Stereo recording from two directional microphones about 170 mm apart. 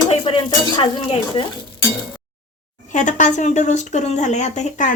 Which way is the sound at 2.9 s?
45° left (ahead or behind).